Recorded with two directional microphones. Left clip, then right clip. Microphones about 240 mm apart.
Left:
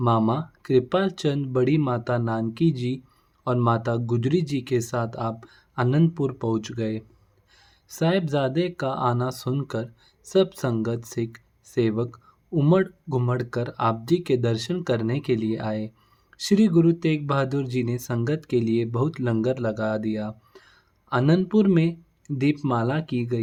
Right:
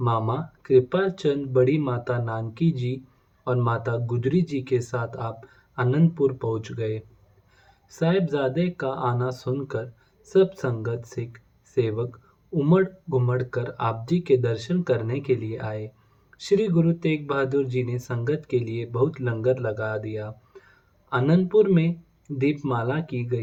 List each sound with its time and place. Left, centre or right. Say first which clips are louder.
0.0 s speech: left 3 dB; left